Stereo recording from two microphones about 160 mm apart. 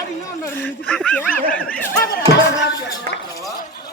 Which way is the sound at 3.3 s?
20° left (ahead or behind).